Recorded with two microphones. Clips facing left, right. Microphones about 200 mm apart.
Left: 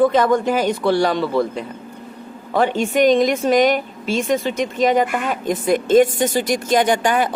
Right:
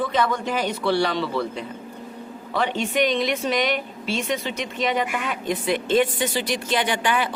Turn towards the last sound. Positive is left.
turn(degrees=45)  # may be behind; listen again after turning